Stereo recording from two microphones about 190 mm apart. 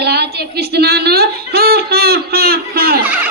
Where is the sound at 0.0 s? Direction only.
60° right (ahead or behind).